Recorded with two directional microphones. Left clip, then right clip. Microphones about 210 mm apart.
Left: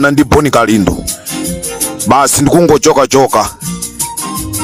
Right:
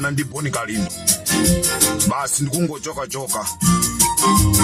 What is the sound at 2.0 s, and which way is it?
Speech, 50° left (ahead or behind).